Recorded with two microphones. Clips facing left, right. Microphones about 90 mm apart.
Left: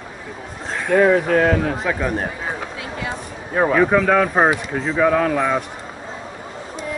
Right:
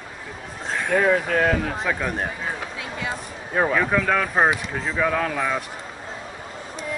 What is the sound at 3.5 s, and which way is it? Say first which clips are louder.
Speech: left 5 dB; 10° left (ahead or behind).